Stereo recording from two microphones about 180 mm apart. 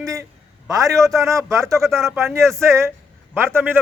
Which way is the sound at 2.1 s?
15° right (ahead or behind).